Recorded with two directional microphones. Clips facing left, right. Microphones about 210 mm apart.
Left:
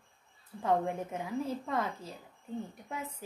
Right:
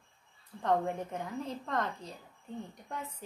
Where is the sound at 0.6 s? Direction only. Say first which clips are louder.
Even; 5° left (ahead or behind).